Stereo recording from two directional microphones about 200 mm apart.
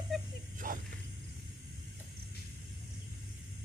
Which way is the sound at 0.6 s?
45° right (ahead or behind).